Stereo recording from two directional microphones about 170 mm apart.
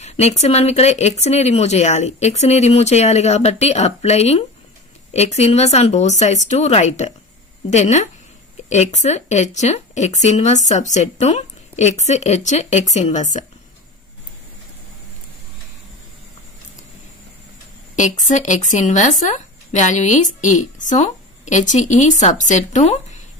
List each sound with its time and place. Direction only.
0.0 s speech: 40° left (ahead or behind)
17.9 s speech: 45° left (ahead or behind)